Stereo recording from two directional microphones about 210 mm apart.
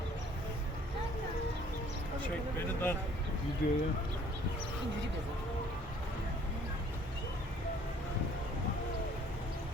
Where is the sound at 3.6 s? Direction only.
45° left (ahead or behind).